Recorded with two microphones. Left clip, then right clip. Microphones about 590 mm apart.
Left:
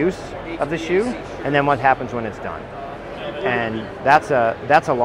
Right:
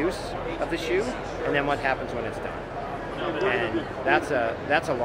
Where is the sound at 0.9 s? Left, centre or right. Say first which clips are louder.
Left 6 dB; left.